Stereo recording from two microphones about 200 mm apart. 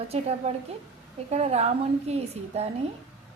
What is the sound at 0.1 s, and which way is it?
A woman's voice, 30° right (ahead or behind).